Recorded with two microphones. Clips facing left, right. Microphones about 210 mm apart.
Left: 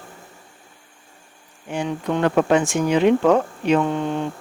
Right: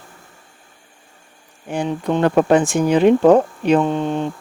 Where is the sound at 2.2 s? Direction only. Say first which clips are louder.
Right 3 dB; 40° right (ahead or behind).